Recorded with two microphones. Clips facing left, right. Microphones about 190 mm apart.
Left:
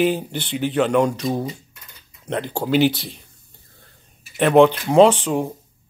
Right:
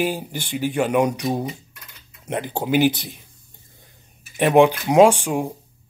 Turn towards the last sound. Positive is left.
turn(degrees=-10)  # may be behind; listen again after turning